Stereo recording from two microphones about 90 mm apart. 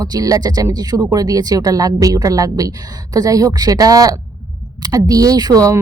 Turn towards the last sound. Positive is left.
turn(degrees=-40)  # may be behind; listen again after turning